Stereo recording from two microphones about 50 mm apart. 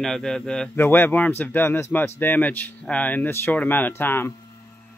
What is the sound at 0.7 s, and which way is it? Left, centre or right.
Speech, left.